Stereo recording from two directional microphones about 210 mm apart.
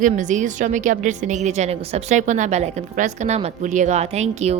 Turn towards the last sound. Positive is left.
turn(degrees=-30)  # may be behind; listen again after turning